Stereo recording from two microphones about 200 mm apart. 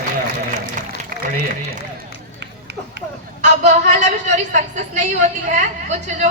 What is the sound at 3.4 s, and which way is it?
Speech, 35° right (ahead or behind).